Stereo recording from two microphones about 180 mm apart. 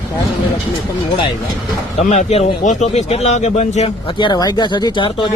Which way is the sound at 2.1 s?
35° left (ahead or behind).